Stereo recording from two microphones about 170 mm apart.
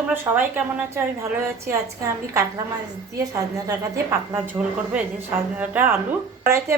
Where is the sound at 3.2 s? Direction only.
20° right (ahead or behind).